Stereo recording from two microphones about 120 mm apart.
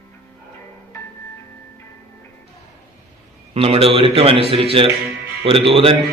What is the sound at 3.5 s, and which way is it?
Mantra, 55° right (ahead or behind).